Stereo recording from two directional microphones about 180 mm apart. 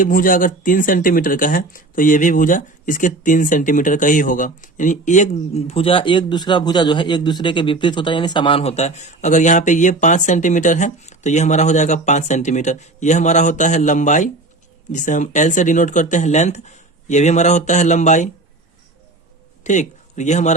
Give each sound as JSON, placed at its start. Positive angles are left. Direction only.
{"t": 0.0, "sound": "speech", "side_deg": 50}
{"t": 19.6, "sound": "speech", "side_deg": 40}